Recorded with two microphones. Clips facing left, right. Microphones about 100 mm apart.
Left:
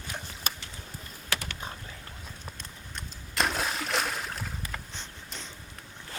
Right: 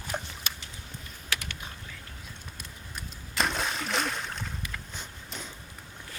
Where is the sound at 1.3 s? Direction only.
35° left (ahead or behind).